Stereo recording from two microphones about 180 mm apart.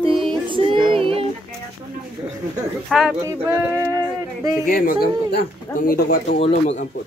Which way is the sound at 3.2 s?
15° right (ahead or behind).